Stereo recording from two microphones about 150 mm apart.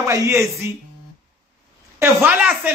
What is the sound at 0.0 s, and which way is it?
Speech, 20° right (ahead or behind).